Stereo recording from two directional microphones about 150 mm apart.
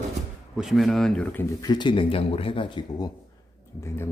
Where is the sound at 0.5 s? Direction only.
Centre (ahead or behind).